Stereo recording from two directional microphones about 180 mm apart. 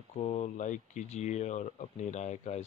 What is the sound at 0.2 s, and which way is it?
Speech, 40° left (ahead or behind).